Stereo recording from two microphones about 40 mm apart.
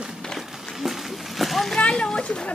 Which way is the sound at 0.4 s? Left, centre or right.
Centre.